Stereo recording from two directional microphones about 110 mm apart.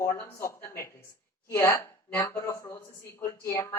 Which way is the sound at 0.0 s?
20° left (ahead or behind).